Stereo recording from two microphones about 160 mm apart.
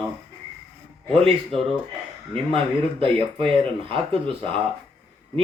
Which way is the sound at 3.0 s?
35° right (ahead or behind).